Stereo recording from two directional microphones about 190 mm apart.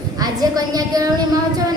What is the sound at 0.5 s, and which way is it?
Speech, 20° right (ahead or behind).